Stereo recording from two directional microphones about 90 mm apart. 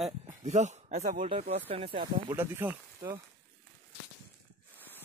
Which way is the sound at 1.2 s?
90° right.